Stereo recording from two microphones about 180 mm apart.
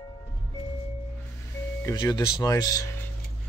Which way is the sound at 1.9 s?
20° left (ahead or behind).